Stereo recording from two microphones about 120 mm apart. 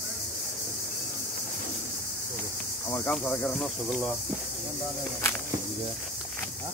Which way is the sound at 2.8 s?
20° left (ahead or behind).